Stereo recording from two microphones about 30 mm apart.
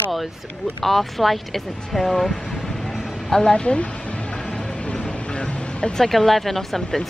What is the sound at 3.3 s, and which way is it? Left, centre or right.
Speech, left.